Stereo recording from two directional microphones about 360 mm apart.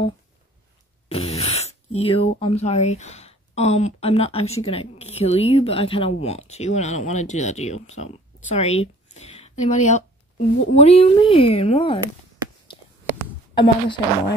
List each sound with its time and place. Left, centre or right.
1.0 s speech: centre
13.6 s speech: centre